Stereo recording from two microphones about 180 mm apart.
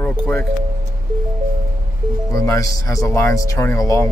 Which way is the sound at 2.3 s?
15° left (ahead or behind).